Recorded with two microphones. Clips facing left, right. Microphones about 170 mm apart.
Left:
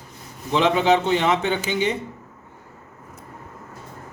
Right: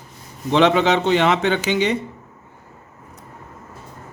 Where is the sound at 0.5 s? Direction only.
75° right (ahead or behind).